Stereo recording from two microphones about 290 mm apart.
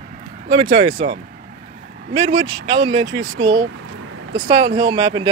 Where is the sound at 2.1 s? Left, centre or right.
Right.